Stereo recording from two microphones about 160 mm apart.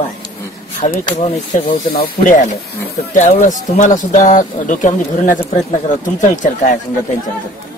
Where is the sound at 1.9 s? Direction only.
65° left (ahead or behind).